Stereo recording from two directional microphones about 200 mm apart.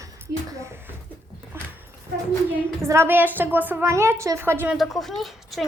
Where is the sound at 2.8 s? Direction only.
15° right (ahead or behind).